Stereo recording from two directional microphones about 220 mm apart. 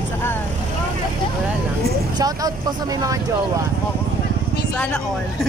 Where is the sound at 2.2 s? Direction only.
15° right (ahead or behind).